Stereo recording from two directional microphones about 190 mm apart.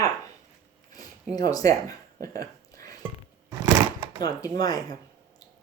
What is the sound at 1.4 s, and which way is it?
Speech, 20° left (ahead or behind).